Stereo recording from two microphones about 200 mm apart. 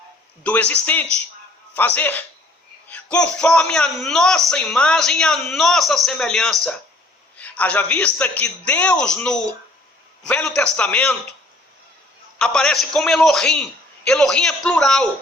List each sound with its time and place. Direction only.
0.4 s a man's voice: 5° left (ahead or behind)
12.5 s a man's voice: 5° left (ahead or behind)